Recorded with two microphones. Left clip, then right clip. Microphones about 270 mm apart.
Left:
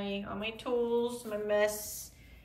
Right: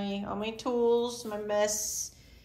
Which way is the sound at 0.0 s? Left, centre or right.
Centre.